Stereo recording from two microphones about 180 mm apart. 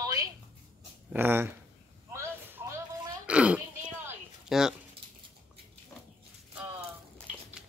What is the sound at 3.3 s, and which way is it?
Pig, 5° right (ahead or behind).